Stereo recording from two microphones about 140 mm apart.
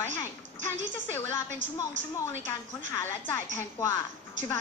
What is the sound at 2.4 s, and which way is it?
Speech, 20° left (ahead or behind).